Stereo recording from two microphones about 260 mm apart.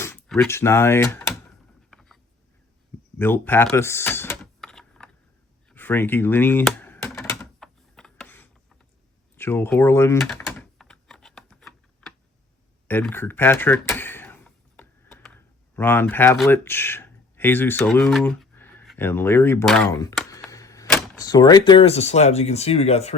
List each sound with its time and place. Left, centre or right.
0.0 s speech: centre
1.9 s a sound: centre
3.2 s typing: centre
12.9 s a sound: centre
15.7 s speech: centre
20.3 s typewriter: centre
21.2 s speech: centre